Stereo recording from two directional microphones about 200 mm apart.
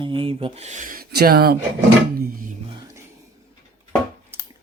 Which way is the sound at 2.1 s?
45° right (ahead or behind).